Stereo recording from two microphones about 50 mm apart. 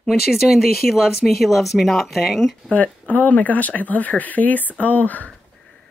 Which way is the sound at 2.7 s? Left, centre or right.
Left.